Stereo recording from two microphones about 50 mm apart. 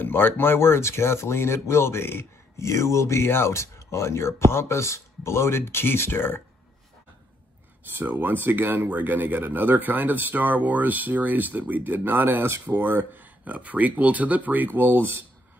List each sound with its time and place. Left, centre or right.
0.0 s speech: left
2.5 s speech: left
7.9 s speech: right
8.8 s speech: right